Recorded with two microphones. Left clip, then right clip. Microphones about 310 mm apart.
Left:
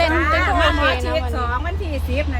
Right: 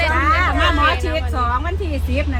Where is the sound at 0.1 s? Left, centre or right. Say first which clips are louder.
Right 1 dB; centre.